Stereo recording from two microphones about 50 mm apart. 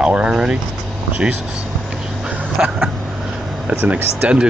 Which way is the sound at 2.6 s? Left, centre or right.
Centre.